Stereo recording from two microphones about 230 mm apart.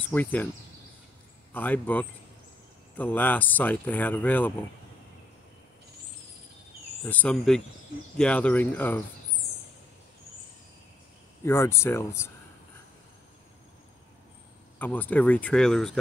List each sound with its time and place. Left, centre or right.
0.1 s speech: centre
1.5 s speech: centre
7.1 s speech: centre
11.4 s speech: centre
14.8 s speech: centre